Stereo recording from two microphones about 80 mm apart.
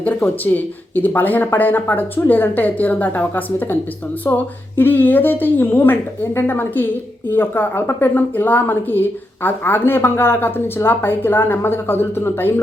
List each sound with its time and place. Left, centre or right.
0.0 s a woman's voice: left
4.3 s speech: left
4.8 s a woman's voice: left